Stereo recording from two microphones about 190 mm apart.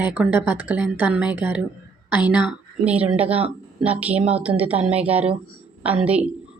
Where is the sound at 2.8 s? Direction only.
5° right (ahead or behind).